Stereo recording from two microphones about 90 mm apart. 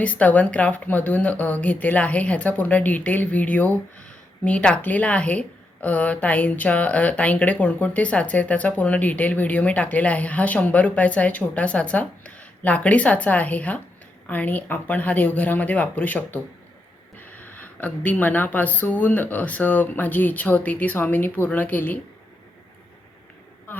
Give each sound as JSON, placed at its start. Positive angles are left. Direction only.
{"t": 0.0, "sound": "a woman's voice", "side_deg": 15}
{"t": 23.7, "sound": "insect", "side_deg": 20}